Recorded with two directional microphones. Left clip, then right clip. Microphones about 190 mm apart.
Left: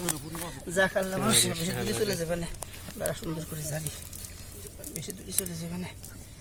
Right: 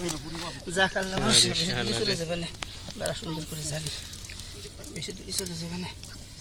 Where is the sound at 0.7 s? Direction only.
20° left (ahead or behind).